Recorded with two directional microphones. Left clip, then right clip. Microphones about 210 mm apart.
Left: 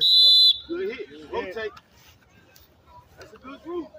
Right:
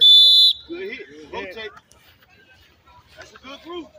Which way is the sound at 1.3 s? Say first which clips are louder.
Left 1 dB; 50° right (ahead or behind).